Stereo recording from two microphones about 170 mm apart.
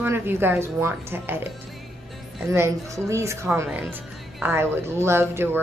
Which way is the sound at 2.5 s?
15° right (ahead or behind).